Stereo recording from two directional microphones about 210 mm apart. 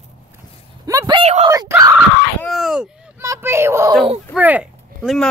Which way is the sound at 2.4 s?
Centre (ahead or behind).